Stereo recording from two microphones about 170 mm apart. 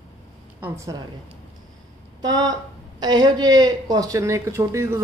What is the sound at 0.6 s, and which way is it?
Speech, 15° right (ahead or behind).